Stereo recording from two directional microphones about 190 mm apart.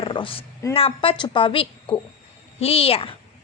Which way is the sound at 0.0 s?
25° left (ahead or behind).